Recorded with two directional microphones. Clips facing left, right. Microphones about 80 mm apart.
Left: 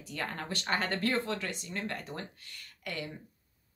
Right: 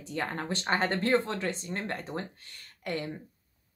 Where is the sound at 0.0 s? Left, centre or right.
Right.